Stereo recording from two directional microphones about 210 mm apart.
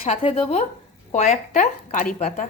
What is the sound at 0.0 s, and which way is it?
A woman's voice, 25° left (ahead or behind).